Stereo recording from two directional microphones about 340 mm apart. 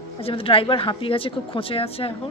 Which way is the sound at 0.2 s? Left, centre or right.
Centre.